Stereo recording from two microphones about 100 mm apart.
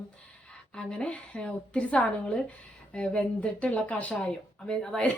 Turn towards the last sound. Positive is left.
turn(degrees=5)  # may be behind; listen again after turning